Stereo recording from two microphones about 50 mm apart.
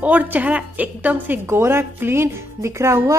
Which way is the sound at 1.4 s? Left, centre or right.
Right.